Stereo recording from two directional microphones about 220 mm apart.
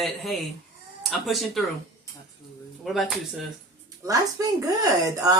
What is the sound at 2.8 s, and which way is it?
Speech, centre (ahead or behind).